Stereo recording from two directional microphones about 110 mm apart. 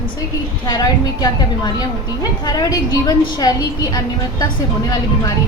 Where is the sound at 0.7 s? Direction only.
35° left (ahead or behind).